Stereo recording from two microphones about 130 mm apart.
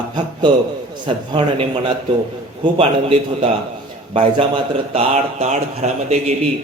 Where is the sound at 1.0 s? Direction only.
40° right (ahead or behind).